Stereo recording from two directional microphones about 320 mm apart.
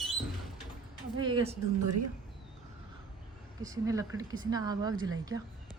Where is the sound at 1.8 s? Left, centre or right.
Right.